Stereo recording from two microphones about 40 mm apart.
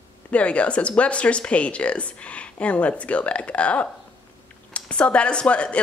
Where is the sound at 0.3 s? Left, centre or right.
Left.